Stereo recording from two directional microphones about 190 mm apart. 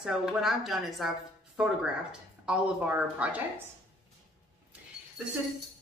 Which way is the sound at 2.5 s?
5° right (ahead or behind).